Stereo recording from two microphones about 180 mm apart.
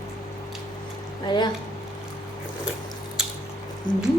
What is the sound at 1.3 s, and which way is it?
Speech, 25° left (ahead or behind).